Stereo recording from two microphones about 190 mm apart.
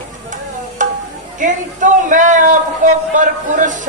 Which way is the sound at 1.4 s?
40° right (ahead or behind).